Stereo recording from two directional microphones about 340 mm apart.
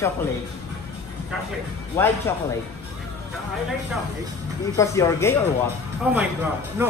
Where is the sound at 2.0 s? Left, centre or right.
Centre.